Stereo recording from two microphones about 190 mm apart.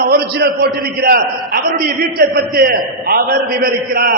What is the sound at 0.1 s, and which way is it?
A man's voice, 55° right (ahead or behind).